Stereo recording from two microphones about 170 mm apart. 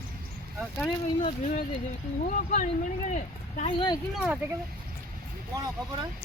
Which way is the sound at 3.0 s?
45° left (ahead or behind).